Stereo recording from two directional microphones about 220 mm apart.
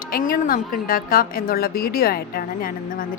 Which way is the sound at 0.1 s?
40° left (ahead or behind).